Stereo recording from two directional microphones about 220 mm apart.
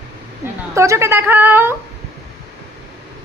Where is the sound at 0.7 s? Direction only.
15° right (ahead or behind).